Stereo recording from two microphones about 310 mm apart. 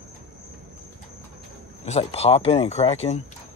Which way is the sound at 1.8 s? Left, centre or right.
Centre.